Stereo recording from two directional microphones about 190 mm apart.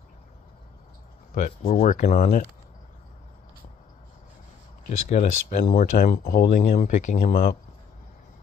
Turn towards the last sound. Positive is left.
turn(degrees=50)  # may be behind; listen again after turning